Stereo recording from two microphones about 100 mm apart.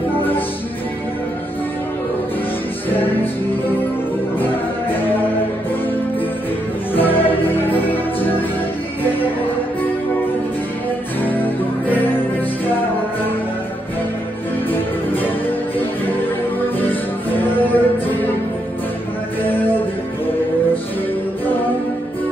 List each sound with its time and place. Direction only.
2.9 s music: 20° left (ahead or behind)
6.9 s music: 20° left (ahead or behind)
11.2 s music: 20° left (ahead or behind)
14.7 s music: 20° left (ahead or behind)
16.8 s music: 20° left (ahead or behind)
19.4 s music: 20° left (ahead or behind)